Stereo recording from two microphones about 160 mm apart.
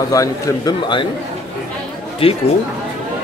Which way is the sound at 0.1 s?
20° left (ahead or behind).